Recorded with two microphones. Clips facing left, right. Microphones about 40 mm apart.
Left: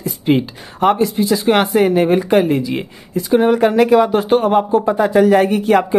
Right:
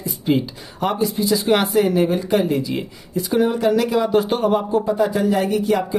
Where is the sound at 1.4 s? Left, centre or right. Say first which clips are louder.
Left 4 dB; left.